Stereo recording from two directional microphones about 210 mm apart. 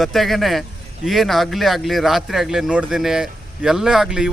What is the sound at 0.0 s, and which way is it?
Speech, centre (ahead or behind).